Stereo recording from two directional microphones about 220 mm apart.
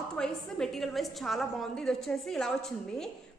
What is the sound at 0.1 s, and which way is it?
A woman's voice, centre (ahead or behind).